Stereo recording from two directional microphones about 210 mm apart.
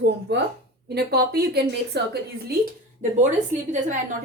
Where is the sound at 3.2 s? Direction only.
35° right (ahead or behind).